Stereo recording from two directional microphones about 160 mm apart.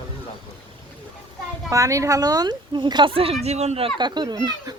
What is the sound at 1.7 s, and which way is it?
A woman's voice, 20° right (ahead or behind).